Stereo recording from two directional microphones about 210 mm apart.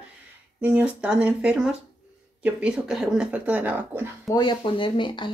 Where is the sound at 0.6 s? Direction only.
5° right (ahead or behind).